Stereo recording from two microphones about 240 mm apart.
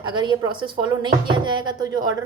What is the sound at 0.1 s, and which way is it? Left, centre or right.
A woman's voice, centre.